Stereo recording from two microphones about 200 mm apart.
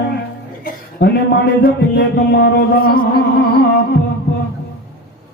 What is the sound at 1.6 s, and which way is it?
Music, 55° left (ahead or behind).